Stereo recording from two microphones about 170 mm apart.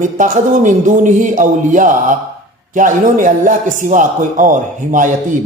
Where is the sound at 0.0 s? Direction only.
50° right (ahead or behind).